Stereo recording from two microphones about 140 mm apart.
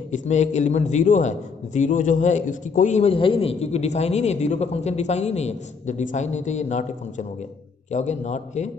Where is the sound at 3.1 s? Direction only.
40° left (ahead or behind).